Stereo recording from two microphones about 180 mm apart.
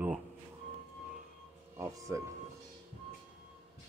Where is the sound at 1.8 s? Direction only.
15° right (ahead or behind).